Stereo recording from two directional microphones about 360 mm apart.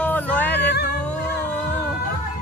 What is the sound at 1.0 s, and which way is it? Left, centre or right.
Music, centre.